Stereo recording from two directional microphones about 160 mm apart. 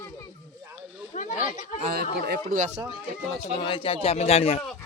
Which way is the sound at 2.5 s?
50° right (ahead or behind).